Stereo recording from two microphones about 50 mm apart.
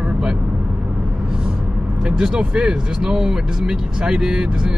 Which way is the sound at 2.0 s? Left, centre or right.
Centre.